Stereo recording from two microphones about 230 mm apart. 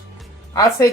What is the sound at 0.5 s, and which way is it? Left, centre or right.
Speech, centre.